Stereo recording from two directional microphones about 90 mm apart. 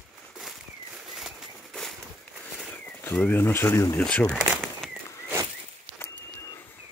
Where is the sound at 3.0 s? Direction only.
25° left (ahead or behind).